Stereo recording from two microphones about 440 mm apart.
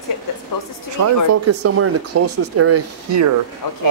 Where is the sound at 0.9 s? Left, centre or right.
Right.